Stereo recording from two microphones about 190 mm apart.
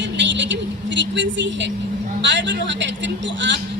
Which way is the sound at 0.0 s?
70° right (ahead or behind).